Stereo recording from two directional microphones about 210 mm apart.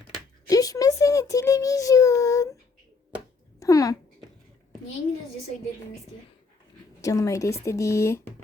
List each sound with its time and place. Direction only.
0.4 s a sound: 15° left (ahead or behind)
3.6 s speech: 15° left (ahead or behind)
7.0 s speech: 15° left (ahead or behind)